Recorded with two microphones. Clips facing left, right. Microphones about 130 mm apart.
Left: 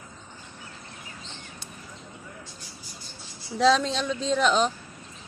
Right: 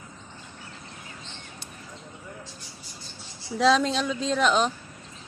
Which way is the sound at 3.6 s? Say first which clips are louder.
Even; centre (ahead or behind).